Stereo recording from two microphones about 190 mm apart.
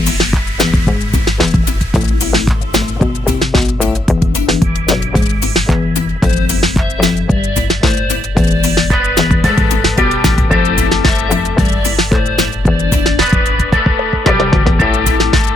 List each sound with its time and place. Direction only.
0.2 s music: centre (ahead or behind)